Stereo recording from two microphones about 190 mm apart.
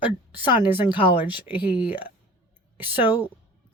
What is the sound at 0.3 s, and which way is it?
A woman's voice, 10° right (ahead or behind).